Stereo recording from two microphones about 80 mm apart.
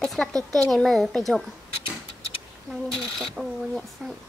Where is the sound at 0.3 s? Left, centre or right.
Right.